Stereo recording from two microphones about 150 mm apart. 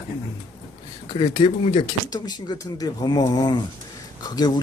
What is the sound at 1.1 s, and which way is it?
Speech, 35° left (ahead or behind).